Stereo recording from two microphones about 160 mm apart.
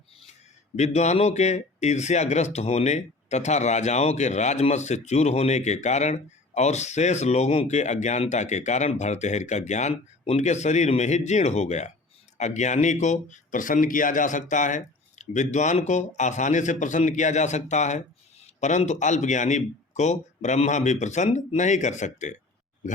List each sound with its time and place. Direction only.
0.8 s speech: 45° left (ahead or behind)